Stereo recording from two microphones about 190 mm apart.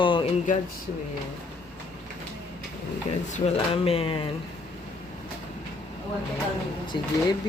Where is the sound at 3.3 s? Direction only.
30° left (ahead or behind).